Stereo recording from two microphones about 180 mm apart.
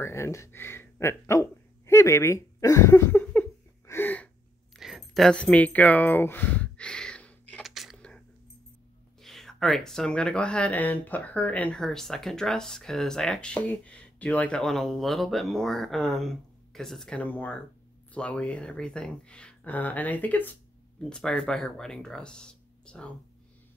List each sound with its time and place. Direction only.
0.0 s speech: 15° left (ahead or behind)
4.7 s a sound: centre (ahead or behind)
9.2 s speech: centre (ahead or behind)